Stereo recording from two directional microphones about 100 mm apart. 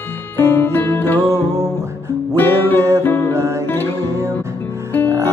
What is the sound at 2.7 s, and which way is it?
Music, 30° right (ahead or behind).